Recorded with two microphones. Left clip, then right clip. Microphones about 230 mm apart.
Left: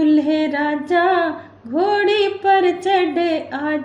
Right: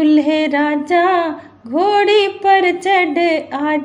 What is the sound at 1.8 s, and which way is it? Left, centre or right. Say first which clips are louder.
Speech: right 4 dB; right.